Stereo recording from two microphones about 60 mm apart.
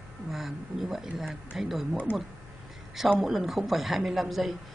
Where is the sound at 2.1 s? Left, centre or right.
Left.